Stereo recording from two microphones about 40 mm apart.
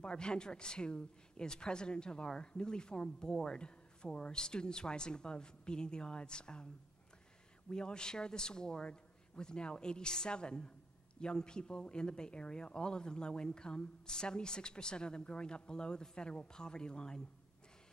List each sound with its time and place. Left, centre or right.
0.0 s speech: left
7.7 s speech: centre